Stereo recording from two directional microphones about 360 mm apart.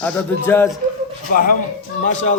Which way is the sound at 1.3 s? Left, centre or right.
Left.